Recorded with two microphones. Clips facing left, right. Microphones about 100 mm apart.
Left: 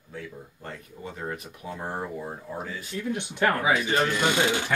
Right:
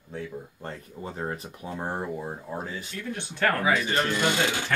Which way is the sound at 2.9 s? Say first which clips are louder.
Left 4 dB; 15° left (ahead or behind).